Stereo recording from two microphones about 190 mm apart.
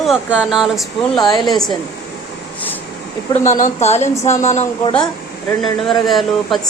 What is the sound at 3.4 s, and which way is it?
A woman's voice, 40° left (ahead or behind).